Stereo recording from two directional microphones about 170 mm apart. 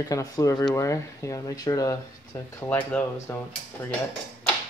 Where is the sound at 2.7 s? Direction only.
10° left (ahead or behind).